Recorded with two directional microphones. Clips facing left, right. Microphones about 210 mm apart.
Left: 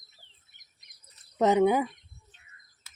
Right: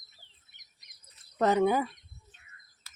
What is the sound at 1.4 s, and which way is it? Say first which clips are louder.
Speech: left 3 dB; 20° left (ahead or behind).